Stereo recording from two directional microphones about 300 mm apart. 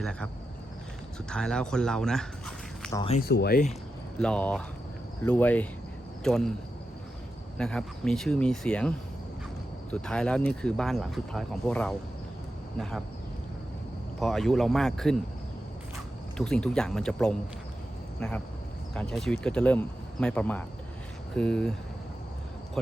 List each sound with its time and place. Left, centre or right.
0.0 s speech: centre
1.3 s speech: centre
3.0 s speech: left
3.2 s speech: left
4.2 s speech: centre
7.6 s speech: centre
14.2 s speech: centre
16.4 s speech: centre